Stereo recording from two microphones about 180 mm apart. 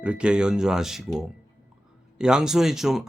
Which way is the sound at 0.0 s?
5° right (ahead or behind).